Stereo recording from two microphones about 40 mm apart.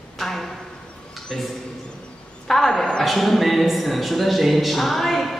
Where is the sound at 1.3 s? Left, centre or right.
Centre.